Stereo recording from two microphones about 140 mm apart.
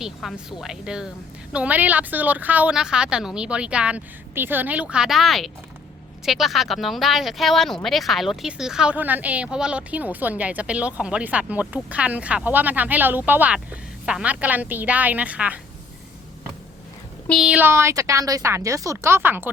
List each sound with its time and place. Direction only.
0.0 s speech: centre (ahead or behind)
17.4 s speech: 10° right (ahead or behind)